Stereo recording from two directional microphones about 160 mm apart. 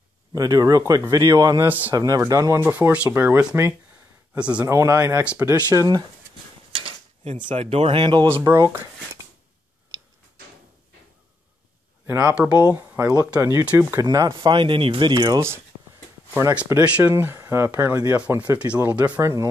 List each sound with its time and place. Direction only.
0.3 s speech: 25° right (ahead or behind)
1.7 s speech: 10° right (ahead or behind)
2.0 s speech: 25° right (ahead or behind)
5.7 s speech: 25° right (ahead or behind)
7.2 s speech: 35° right (ahead or behind)
12.1 s speech: 5° right (ahead or behind)
16.6 s speech: 10° right (ahead or behind)